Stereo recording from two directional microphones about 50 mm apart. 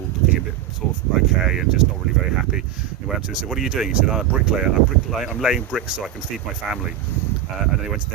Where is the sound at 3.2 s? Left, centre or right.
Centre.